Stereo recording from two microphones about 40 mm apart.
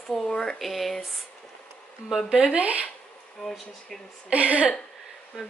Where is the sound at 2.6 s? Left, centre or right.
Right.